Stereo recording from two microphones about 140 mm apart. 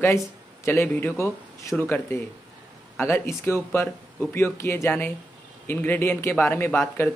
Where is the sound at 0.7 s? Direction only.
15° left (ahead or behind).